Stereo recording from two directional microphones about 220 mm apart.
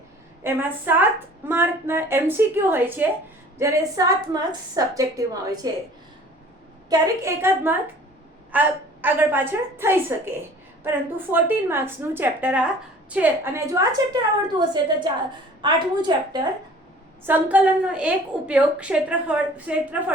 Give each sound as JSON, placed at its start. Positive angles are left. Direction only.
{"t": 0.4, "sound": "a woman's voice", "side_deg": -10}
{"t": 6.9, "sound": "a woman's voice", "side_deg": -15}
{"t": 17.2, "sound": "a woman's voice", "side_deg": -5}